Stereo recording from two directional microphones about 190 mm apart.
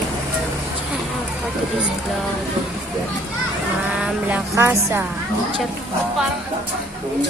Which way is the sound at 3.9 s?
10° right (ahead or behind).